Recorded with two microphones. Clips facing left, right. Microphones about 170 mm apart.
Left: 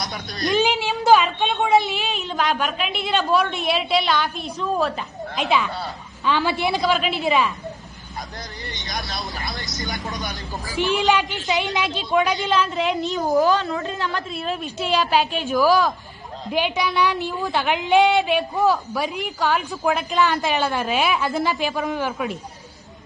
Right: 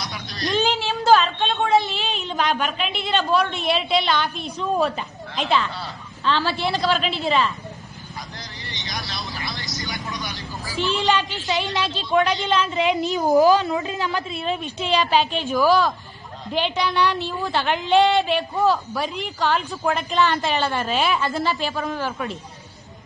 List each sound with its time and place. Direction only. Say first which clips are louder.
0.0 s a sound: left 2 dB; 50° left (ahead or behind)
0.6 s a sound: even; 10° left (ahead or behind)
1.7 s a woman's voice: left 2 dB; 5° left (ahead or behind)
8.7 s vehicle: left 1 dB; 50° left (ahead or behind)
10.8 s a woman's voice: left 2 dB; 15° left (ahead or behind)
12.4 s a woman's voice: right 1 dB; centre (ahead or behind)